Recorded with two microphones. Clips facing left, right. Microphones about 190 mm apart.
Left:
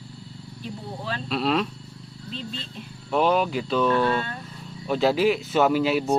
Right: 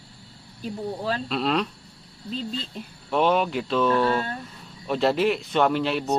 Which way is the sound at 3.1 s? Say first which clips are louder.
Even; centre (ahead or behind).